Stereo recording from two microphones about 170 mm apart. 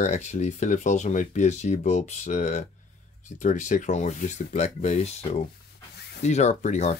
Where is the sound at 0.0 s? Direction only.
40° left (ahead or behind).